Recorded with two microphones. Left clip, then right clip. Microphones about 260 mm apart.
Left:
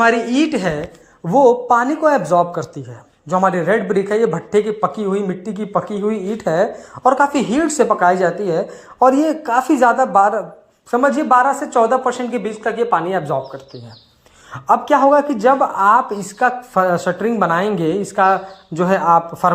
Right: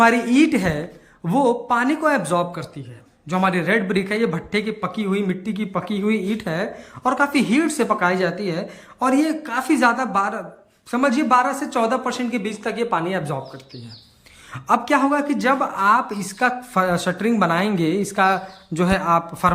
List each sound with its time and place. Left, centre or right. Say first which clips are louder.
0.0 s speech: left 1 dB; centre
14.5 s speech: left 5 dB; centre